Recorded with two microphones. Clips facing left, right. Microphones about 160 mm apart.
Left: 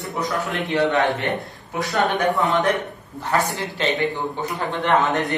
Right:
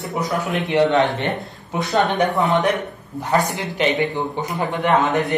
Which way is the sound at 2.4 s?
Centre (ahead or behind).